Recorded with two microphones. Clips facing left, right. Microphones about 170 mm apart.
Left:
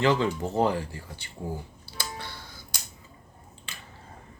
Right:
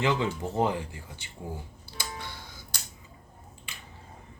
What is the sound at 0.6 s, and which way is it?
Speech, 20° right (ahead or behind).